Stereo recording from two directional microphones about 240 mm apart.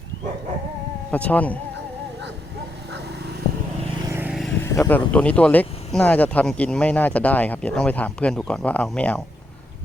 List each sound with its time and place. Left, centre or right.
1.1 s speech: centre
4.0 s vehicle: centre
4.6 s speech: centre